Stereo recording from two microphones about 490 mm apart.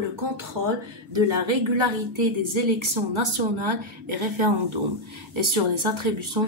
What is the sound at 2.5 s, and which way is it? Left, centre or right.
A woman's voice, right.